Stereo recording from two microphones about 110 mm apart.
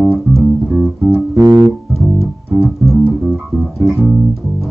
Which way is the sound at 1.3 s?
35° right (ahead or behind).